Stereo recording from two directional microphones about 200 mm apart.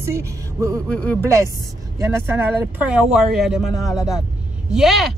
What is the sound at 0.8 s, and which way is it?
Speech, 5° left (ahead or behind).